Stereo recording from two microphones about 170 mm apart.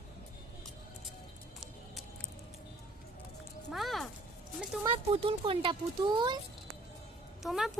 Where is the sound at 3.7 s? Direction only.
Centre (ahead or behind).